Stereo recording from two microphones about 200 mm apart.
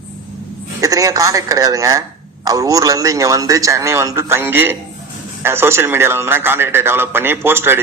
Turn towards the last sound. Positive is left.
turn(degrees=-10)  # may be behind; listen again after turning